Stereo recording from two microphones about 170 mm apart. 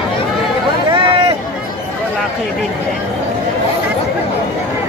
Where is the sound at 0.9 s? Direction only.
30° right (ahead or behind).